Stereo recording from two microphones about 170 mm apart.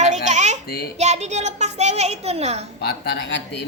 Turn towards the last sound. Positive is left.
turn(degrees=75)  # may be behind; listen again after turning